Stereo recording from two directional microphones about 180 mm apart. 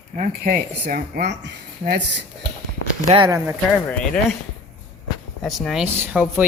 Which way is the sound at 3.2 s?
20° right (ahead or behind).